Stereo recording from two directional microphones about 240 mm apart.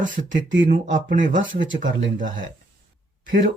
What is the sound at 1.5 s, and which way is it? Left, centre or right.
Speech, right.